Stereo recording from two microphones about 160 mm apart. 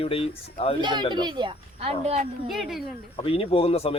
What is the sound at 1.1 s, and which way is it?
Speech, 25° right (ahead or behind).